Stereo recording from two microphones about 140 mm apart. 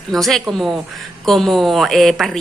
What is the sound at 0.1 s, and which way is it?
Speech, centre (ahead or behind).